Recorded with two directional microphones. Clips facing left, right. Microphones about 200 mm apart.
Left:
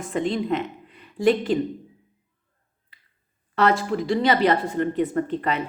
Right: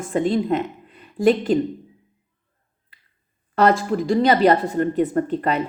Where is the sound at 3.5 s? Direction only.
45° right (ahead or behind).